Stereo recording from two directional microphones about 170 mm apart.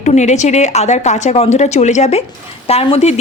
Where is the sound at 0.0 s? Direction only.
45° left (ahead or behind).